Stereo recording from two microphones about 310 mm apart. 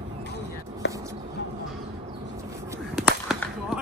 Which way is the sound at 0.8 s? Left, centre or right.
Left.